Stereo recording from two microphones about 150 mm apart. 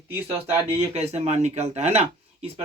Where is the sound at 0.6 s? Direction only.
45° right (ahead or behind).